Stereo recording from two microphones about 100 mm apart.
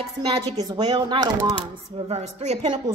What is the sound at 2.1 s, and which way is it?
Speech, 90° right.